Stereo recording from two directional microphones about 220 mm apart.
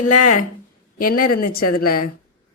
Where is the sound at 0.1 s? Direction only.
90° left.